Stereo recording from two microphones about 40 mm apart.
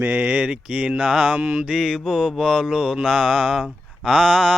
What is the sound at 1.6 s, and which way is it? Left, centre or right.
Speech, centre.